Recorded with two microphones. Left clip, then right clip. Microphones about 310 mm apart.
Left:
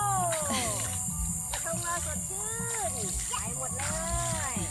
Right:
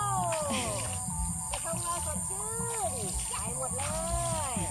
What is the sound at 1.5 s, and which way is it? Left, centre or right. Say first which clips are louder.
Music: left 1 dB; centre.